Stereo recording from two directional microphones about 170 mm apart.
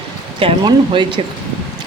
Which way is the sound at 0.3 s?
30° right (ahead or behind).